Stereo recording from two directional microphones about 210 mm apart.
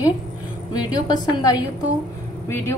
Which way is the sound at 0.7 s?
20° left (ahead or behind).